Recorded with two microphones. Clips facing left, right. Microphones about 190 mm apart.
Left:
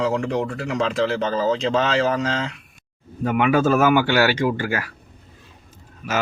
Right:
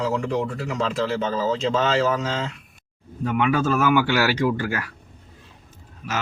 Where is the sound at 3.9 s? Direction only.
Centre (ahead or behind).